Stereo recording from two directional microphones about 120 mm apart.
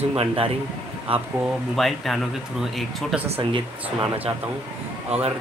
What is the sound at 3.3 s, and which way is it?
Speech, 45° right (ahead or behind).